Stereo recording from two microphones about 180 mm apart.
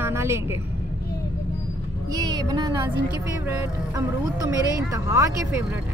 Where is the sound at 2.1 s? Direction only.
20° right (ahead or behind).